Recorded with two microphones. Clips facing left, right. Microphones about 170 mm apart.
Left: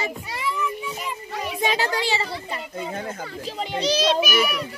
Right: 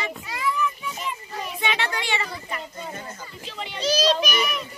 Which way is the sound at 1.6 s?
35° left (ahead or behind).